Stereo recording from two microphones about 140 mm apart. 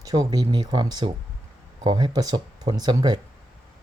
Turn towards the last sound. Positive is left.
turn(degrees=-30)  # may be behind; listen again after turning